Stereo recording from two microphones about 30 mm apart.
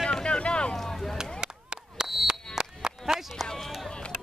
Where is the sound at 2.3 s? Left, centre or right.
Right.